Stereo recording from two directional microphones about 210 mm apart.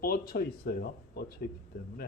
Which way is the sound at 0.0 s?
45° left (ahead or behind).